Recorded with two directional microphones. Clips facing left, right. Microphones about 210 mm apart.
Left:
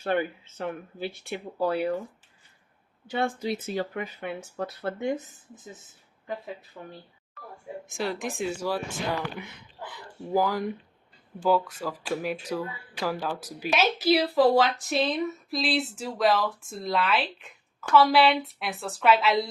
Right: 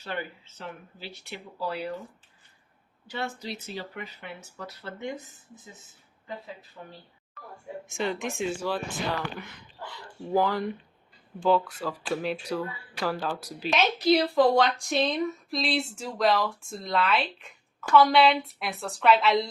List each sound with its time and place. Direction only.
0.0 s speech: 55° left (ahead or behind)
3.1 s speech: 50° left (ahead or behind)
7.9 s speech: centre (ahead or behind)